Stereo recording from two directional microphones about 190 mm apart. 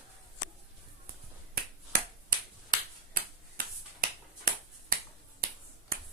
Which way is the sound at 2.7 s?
50° right (ahead or behind).